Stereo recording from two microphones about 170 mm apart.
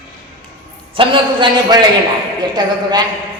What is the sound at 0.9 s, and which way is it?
A man's voice, 30° right (ahead or behind).